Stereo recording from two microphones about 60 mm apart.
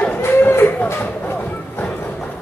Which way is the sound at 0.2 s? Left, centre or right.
Left.